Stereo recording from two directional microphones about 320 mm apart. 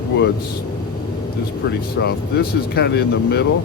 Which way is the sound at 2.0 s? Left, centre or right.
Left.